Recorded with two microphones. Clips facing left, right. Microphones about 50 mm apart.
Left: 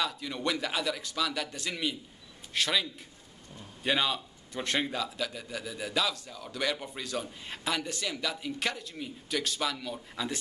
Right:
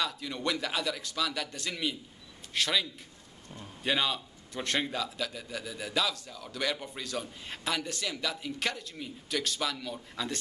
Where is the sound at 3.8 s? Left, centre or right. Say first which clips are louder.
Left 1 dB; centre.